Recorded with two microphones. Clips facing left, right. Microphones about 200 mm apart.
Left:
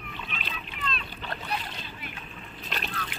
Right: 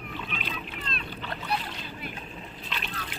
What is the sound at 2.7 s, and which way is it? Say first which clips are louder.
Splash: left 3 dB; 45° left (ahead or behind).